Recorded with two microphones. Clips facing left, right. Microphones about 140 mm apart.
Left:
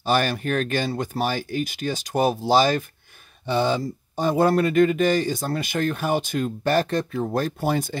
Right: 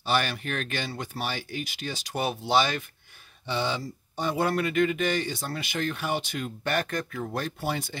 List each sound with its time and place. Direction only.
0.0 s speech: 45° left (ahead or behind)
7.2 s speech: 45° left (ahead or behind)